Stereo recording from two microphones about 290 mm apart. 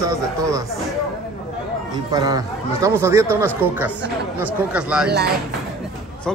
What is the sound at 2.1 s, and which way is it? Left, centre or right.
A man's voice, centre.